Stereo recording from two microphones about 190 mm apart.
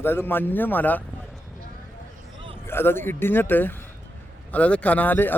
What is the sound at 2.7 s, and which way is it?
Speech, 10° left (ahead or behind).